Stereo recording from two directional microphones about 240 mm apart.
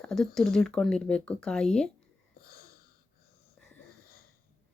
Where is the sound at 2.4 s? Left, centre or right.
Left.